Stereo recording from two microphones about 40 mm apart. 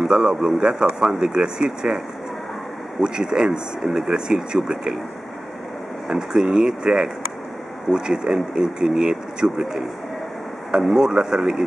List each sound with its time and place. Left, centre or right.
0.0 s speech: centre
3.0 s speech: centre
6.0 s speech: centre